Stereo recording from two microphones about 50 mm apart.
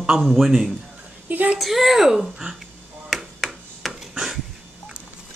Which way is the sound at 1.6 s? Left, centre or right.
Centre.